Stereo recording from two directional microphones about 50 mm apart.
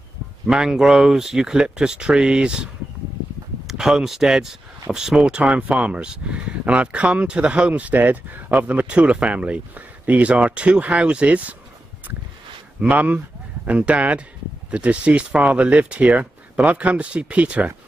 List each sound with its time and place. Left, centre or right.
0.5 s speech: centre; by 11.5 s right
12.8 s speech: right